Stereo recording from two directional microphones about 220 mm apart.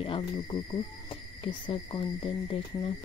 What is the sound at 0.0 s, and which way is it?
Speech, 20° left (ahead or behind).